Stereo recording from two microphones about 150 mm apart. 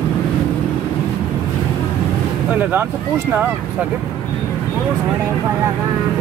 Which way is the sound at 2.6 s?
10° right (ahead or behind).